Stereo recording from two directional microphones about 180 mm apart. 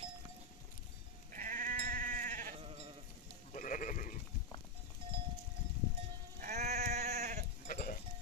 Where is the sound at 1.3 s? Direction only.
45° right (ahead or behind).